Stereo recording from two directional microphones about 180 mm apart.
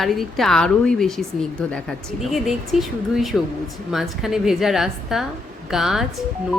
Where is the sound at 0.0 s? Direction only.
Centre (ahead or behind).